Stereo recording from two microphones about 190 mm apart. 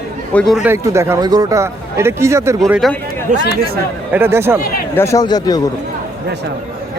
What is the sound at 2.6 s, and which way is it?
Speech, centre (ahead or behind).